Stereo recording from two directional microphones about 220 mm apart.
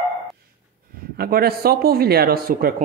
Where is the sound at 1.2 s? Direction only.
45° right (ahead or behind).